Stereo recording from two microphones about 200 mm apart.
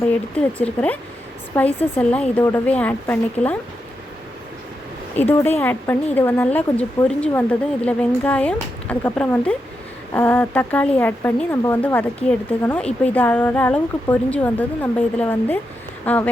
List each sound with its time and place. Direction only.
0.3 s speech: 5° left (ahead or behind)
5.1 s speech: 10° left (ahead or behind)